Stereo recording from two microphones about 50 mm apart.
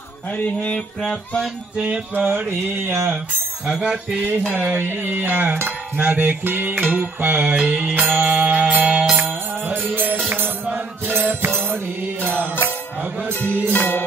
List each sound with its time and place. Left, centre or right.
0.4 s a sound: left
2.2 s a sound: right
3.6 s speech: centre
4.5 s music: right
4.7 s music: right
7.5 s music: right
9.7 s music: right
11.1 s music: right
13.3 s music: left